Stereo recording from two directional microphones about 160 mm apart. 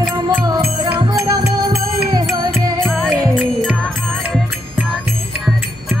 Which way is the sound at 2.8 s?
5° left (ahead or behind).